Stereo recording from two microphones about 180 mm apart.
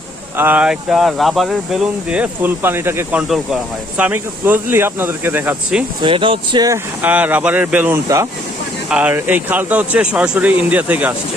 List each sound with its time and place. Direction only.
0.3 s speech: 10° right (ahead or behind)
6.0 s speech: 30° right (ahead or behind)
7.0 s speech: 10° right (ahead or behind)